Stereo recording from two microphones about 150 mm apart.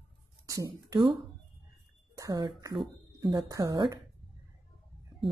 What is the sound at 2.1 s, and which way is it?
Speech, 25° right (ahead or behind).